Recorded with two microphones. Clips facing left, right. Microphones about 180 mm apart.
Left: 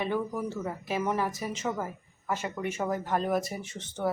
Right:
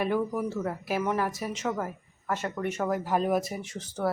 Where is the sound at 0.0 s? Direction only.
5° right (ahead or behind).